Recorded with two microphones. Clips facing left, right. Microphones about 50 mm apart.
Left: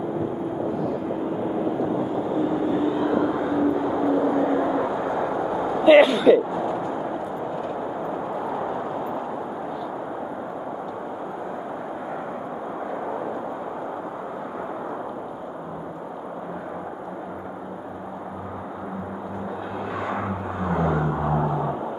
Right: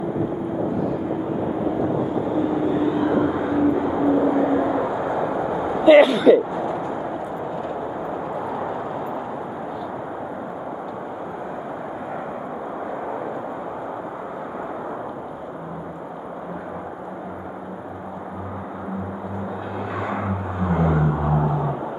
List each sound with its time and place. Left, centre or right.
1.8 s vehicle: centre
5.9 s a sound: centre
7.6 s vehicle: centre
20.0 s vehicle: centre